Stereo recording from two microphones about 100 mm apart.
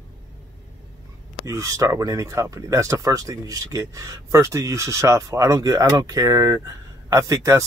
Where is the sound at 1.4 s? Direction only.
30° right (ahead or behind).